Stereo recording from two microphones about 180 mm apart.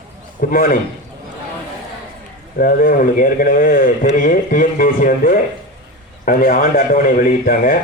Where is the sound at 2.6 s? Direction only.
50° left (ahead or behind).